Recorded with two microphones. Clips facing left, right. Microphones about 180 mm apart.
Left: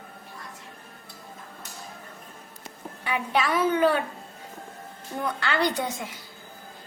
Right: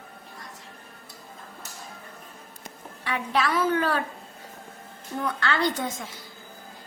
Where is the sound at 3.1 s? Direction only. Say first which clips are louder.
Even; 10° left (ahead or behind).